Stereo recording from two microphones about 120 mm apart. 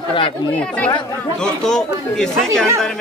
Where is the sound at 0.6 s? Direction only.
10° left (ahead or behind).